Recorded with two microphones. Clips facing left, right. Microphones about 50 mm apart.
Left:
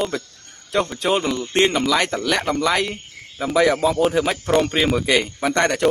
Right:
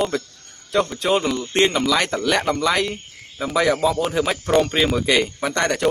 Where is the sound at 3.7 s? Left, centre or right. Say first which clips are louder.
Left 1 dB; centre.